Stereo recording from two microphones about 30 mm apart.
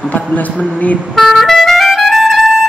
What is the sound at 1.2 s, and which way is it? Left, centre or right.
Music, centre.